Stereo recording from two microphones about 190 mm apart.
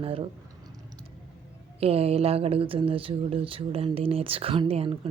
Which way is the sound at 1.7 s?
30° right (ahead or behind).